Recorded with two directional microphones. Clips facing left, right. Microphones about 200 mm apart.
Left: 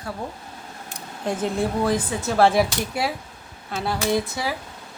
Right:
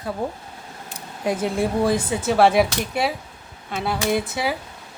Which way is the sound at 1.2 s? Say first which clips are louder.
Right 2 dB; 10° right (ahead or behind).